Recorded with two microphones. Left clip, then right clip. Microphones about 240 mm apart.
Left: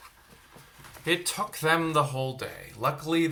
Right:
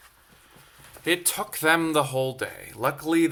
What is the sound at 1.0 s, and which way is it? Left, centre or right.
Speech, right.